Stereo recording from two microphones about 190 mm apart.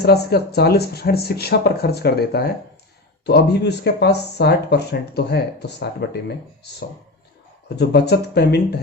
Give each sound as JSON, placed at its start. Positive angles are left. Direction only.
{"t": 0.0, "sound": "speech", "side_deg": 60}
{"t": 7.8, "sound": "speech", "side_deg": 60}